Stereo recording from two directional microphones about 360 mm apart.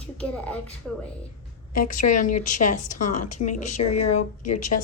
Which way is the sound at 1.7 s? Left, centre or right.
Left.